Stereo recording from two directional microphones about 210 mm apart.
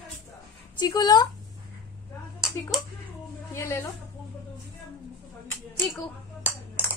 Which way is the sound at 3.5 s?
10° left (ahead or behind).